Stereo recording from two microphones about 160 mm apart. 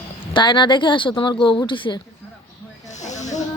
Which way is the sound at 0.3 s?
30° left (ahead or behind).